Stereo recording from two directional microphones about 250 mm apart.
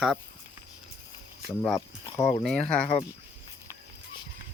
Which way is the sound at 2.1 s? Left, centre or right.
Centre.